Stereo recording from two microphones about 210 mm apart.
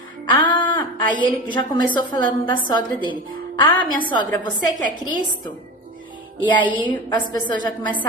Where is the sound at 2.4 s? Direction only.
20° left (ahead or behind).